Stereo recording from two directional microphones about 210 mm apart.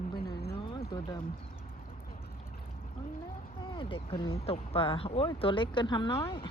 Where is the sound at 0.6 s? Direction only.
20° left (ahead or behind).